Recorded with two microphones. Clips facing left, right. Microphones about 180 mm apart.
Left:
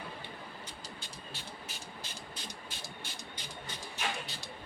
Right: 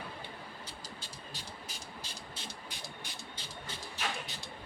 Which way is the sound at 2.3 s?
20° right (ahead or behind).